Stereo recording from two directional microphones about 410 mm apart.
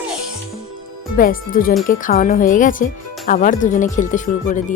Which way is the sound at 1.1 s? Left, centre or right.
Left.